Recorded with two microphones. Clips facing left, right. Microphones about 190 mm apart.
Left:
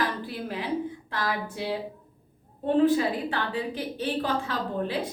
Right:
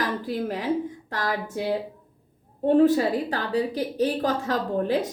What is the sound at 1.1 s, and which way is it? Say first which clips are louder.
Speech: right 2 dB; 45° right (ahead or behind).